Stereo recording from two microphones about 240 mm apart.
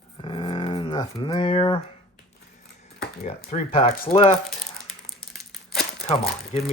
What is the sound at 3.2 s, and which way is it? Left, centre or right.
Speech, left.